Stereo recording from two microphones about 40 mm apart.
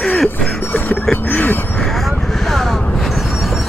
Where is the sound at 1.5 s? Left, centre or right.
Left.